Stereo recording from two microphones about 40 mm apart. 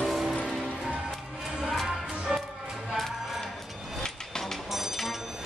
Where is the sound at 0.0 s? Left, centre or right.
Centre.